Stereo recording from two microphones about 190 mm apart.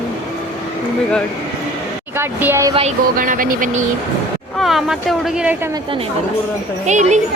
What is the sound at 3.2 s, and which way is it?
Speech, 45° right (ahead or behind).